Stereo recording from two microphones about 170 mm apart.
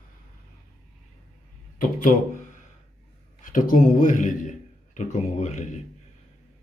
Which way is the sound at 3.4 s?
50° left (ahead or behind).